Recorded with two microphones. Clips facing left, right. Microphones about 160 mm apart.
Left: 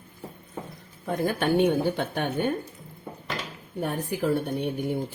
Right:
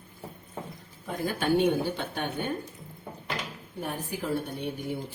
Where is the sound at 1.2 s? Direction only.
55° left (ahead or behind).